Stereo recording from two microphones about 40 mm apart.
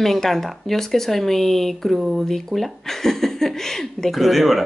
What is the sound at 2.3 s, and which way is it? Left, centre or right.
Speech, centre.